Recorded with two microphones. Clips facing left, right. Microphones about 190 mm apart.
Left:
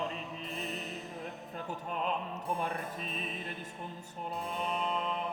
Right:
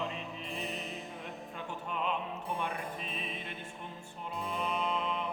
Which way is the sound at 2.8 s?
Centre (ahead or behind).